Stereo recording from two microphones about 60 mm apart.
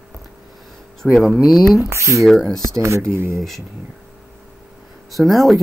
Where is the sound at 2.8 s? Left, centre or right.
Right.